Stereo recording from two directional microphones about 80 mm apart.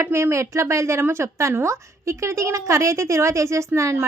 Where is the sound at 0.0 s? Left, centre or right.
Right.